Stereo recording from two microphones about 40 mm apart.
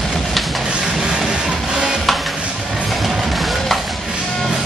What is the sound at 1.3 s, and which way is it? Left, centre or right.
Music, right.